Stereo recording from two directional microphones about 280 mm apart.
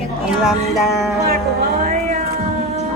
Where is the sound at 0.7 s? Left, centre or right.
Centre.